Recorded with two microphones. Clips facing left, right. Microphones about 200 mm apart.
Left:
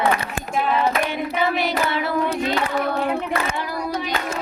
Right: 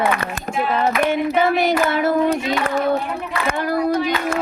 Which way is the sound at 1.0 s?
50° right (ahead or behind).